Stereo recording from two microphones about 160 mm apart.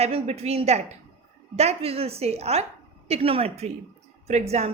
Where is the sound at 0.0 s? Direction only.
40° right (ahead or behind).